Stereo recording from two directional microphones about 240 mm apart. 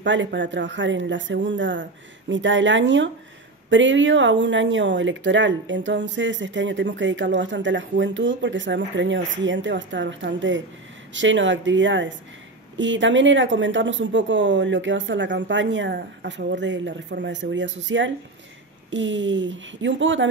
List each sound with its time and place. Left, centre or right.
0.0 s speech: right